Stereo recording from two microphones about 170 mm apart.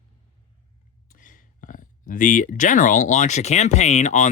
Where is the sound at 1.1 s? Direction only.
50° left (ahead or behind).